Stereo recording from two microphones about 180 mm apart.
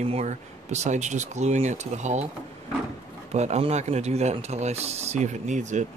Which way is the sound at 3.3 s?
40° right (ahead or behind).